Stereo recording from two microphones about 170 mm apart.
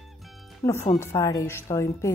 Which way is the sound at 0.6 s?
15° left (ahead or behind).